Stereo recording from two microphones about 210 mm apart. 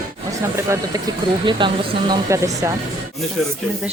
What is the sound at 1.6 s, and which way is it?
Speech, 20° right (ahead or behind).